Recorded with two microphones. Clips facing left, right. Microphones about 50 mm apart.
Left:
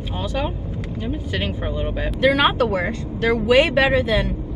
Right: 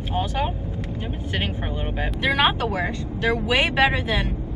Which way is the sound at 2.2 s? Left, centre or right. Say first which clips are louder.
Left 4 dB; right.